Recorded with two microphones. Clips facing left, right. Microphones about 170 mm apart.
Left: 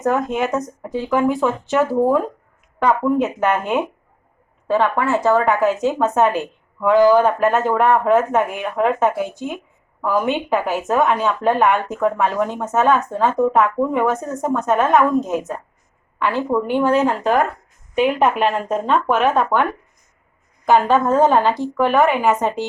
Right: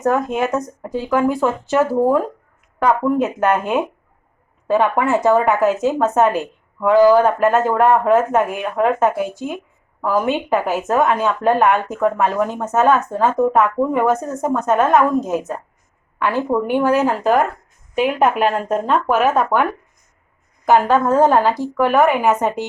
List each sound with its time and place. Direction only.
0.1 s a woman's voice: centre (ahead or behind)
4.7 s a woman's voice: 15° right (ahead or behind)
20.7 s a woman's voice: 5° right (ahead or behind)